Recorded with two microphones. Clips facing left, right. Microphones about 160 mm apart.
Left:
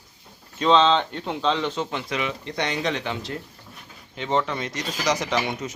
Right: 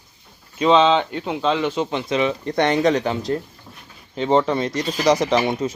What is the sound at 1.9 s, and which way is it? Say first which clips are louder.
Speech: right 7 dB; 30° right (ahead or behind).